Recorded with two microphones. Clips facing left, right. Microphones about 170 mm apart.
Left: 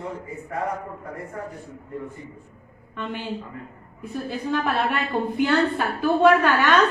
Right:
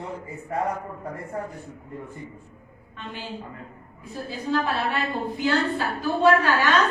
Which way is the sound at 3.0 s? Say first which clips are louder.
Left 5 dB; 60° left (ahead or behind).